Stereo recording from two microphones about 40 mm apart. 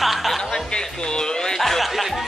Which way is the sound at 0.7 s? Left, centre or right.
Centre.